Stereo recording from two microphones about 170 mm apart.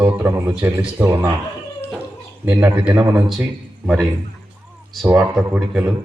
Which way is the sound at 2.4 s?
10° right (ahead or behind).